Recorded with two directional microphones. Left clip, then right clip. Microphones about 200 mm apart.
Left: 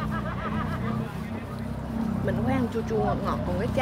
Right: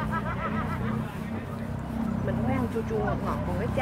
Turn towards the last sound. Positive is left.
turn(degrees=25)  # may be behind; listen again after turning